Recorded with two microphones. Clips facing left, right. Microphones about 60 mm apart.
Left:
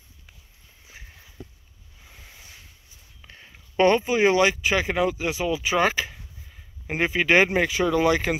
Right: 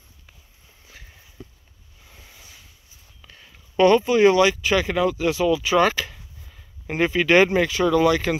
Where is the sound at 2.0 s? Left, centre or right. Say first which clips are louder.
Even; centre.